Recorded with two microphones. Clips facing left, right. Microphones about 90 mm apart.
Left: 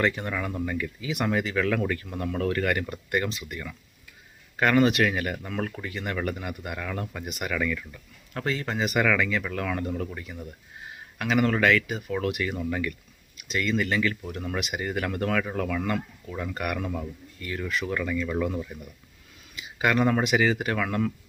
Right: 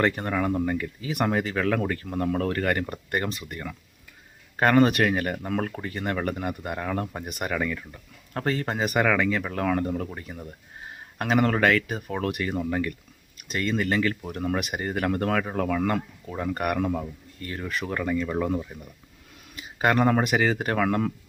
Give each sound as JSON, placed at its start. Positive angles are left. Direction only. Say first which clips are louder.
{"t": 0.0, "sound": "speech", "louder": "right 3 dB", "side_deg": -40}
{"t": 19.5, "sound": "speech", "louder": "right 2 dB", "side_deg": -40}